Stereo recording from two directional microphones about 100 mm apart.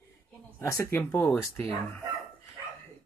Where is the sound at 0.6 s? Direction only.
30° left (ahead or behind).